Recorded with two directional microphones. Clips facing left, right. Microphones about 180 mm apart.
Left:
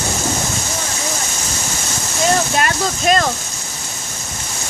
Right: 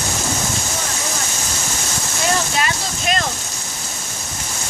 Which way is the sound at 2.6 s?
50° left (ahead or behind).